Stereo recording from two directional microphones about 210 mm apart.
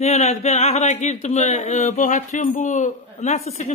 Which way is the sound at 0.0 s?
30° left (ahead or behind).